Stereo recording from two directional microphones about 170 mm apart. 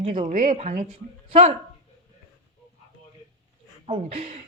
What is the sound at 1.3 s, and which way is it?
Speech, 35° right (ahead or behind).